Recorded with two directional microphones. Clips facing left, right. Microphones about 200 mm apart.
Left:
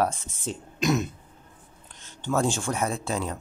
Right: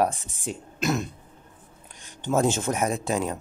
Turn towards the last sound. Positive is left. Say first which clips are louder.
# right 3 dB
turn(degrees=-15)  # may be behind; listen again after turning